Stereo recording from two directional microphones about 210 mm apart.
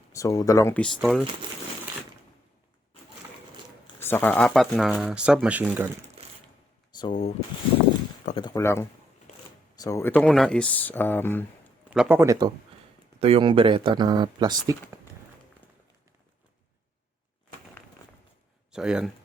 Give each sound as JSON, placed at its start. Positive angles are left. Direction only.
{"t": 0.1, "sound": "speech", "side_deg": 15}
{"t": 4.0, "sound": "speech", "side_deg": 10}
{"t": 6.2, "sound": "a sound", "side_deg": -30}
{"t": 6.9, "sound": "speech", "side_deg": 20}
{"t": 8.4, "sound": "speech", "side_deg": 15}
{"t": 11.9, "sound": "a man's voice", "side_deg": -5}
{"t": 13.1, "sound": "speech", "side_deg": -25}
{"t": 18.7, "sound": "speech", "side_deg": -5}